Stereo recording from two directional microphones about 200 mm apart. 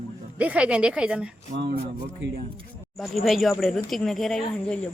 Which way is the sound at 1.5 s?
60° right (ahead or behind).